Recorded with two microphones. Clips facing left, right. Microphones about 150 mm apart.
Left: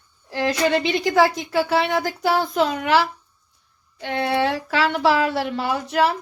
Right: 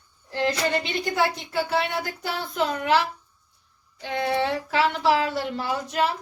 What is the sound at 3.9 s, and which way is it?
Speech, 70° left (ahead or behind).